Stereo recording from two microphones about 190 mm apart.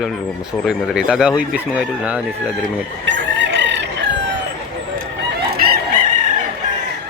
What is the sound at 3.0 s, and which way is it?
Chicken, 65° right (ahead or behind).